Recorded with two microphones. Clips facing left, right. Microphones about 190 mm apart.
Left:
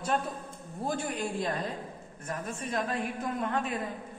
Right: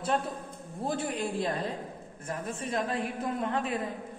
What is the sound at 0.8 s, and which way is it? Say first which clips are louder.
Speech: right 1 dB; 30° right (ahead or behind).